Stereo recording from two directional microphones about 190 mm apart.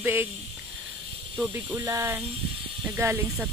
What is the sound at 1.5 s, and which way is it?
Speech, 15° right (ahead or behind).